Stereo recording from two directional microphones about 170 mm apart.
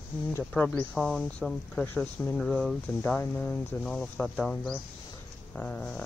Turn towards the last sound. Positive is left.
turn(degrees=5)  # may be behind; listen again after turning